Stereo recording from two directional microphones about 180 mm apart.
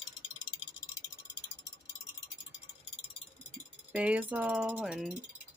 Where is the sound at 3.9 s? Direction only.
5° right (ahead or behind).